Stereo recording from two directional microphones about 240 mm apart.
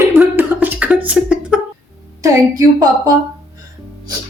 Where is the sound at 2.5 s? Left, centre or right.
Centre.